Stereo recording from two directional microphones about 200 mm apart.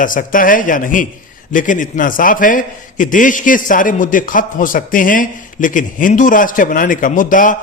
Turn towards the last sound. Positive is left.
turn(degrees=40)  # may be behind; listen again after turning